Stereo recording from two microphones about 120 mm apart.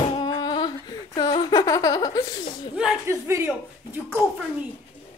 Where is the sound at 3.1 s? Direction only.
25° right (ahead or behind).